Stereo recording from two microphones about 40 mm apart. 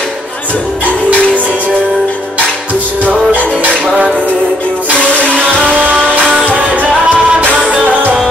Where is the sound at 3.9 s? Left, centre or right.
Right.